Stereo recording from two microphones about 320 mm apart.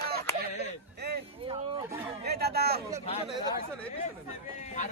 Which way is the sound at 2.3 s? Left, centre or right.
Right.